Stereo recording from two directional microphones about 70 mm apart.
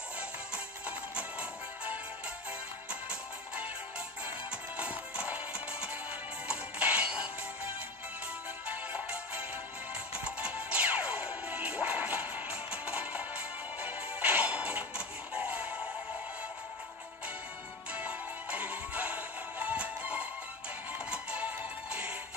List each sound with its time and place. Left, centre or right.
0.8 s music: centre
17.9 s music: centre